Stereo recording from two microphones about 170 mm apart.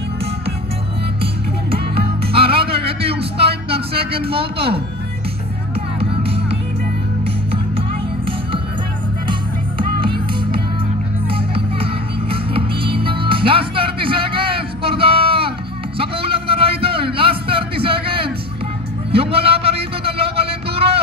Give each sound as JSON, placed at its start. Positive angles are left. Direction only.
{"t": 1.2, "sound": "music", "side_deg": -35}
{"t": 4.0, "sound": "a man's voice", "side_deg": -35}
{"t": 5.9, "sound": "music", "side_deg": -35}
{"t": 9.3, "sound": "music", "side_deg": -30}
{"t": 16.0, "sound": "a sound", "side_deg": -30}